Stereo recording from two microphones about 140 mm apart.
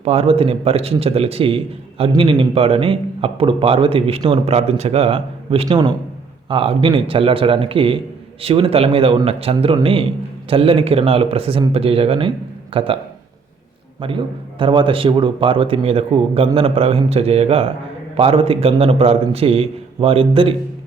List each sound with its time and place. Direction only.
0.0 s a man's voice: 45° right (ahead or behind)
14.0 s a man's voice: 40° right (ahead or behind)